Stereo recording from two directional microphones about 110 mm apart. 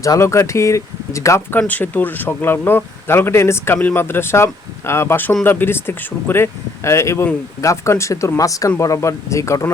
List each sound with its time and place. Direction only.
0.0 s speech: 30° left (ahead or behind)
1.5 s speech: 15° left (ahead or behind)